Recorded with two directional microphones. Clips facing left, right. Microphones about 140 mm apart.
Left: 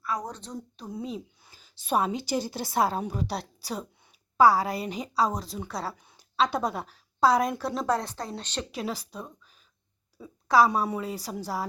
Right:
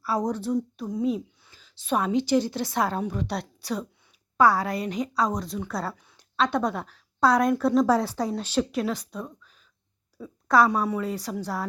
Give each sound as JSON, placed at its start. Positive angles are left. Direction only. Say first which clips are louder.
{"t": 0.0, "sound": "speech", "louder": "right 5 dB", "side_deg": -30}
{"t": 0.3, "sound": "a woman's voice", "louder": "right 12 dB", "side_deg": -10}
{"t": 0.5, "sound": "a woman's voice", "louder": "right 10 dB", "side_deg": 5}
{"t": 6.0, "sound": "a sound", "louder": "even", "side_deg": 15}
{"t": 6.3, "sound": "a woman's voice", "louder": "right 2 dB", "side_deg": 5}
{"t": 7.9, "sound": "a woman's voice", "louder": "right 5 dB", "side_deg": -10}